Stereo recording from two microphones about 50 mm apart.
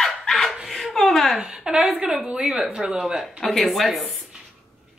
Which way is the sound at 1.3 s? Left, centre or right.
Centre.